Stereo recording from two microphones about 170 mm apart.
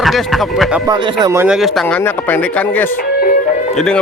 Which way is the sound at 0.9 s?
20° right (ahead or behind).